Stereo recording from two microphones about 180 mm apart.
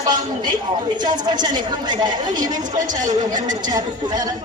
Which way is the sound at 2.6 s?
45° right (ahead or behind).